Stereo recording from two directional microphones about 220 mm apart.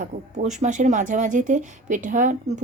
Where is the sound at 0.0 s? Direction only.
35° right (ahead or behind).